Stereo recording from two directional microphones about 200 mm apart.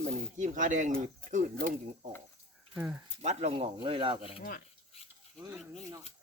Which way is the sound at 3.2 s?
30° right (ahead or behind).